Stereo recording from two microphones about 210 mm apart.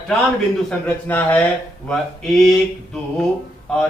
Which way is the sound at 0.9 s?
10° left (ahead or behind).